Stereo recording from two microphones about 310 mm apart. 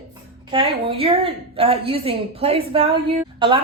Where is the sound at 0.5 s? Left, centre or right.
Centre.